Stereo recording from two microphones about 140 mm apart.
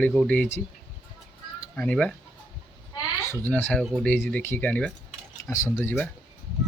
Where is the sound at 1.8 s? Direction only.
5° left (ahead or behind).